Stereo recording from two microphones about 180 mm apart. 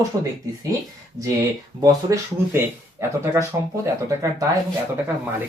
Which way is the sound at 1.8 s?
20° right (ahead or behind).